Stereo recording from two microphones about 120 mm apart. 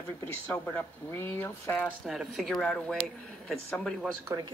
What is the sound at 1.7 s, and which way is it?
Speech, 5° left (ahead or behind).